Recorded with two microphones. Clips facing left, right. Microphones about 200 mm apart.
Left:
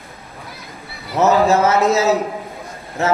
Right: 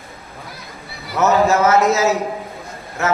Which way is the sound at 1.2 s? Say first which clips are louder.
Left 1 dB; 30° left (ahead or behind).